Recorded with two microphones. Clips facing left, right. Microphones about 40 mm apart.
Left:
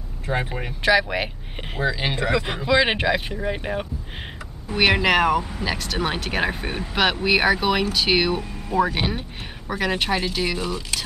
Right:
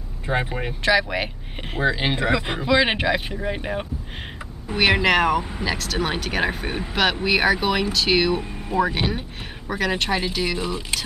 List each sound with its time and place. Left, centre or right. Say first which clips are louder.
0.3 s speech: right 1 dB; centre
0.8 s speech: left 1 dB; centre
1.8 s speech: right 2 dB; centre
8.4 s speech: left 1 dB; centre
8.8 s speech: right 1 dB; centre
10.6 s speech: right 1 dB; centre